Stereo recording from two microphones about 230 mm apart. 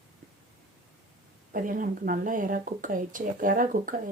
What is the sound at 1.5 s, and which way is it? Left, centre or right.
Speech, right.